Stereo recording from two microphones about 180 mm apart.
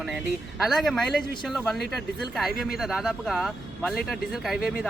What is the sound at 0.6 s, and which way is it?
Speech, centre (ahead or behind).